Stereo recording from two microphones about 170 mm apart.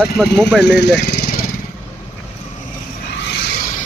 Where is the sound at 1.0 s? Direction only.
70° left (ahead or behind).